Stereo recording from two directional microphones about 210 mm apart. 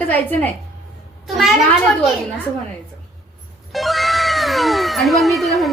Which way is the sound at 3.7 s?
Centre (ahead or behind).